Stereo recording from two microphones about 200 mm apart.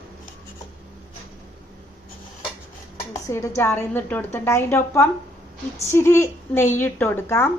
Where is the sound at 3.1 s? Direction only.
15° left (ahead or behind).